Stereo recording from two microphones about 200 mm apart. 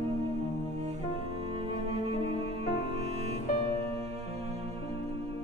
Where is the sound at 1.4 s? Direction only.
30° right (ahead or behind).